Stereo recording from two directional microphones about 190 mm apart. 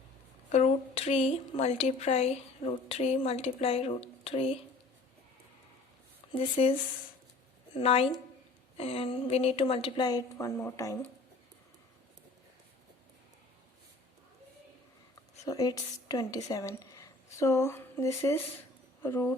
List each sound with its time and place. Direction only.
0.5 s speech: 35° left (ahead or behind)
6.3 s a woman's voice: 30° left (ahead or behind)
15.4 s speech: 20° left (ahead or behind)